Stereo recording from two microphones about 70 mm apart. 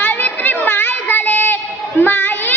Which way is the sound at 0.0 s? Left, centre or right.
Left.